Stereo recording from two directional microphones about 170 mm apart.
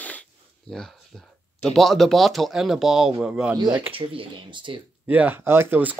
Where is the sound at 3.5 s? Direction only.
25° right (ahead or behind).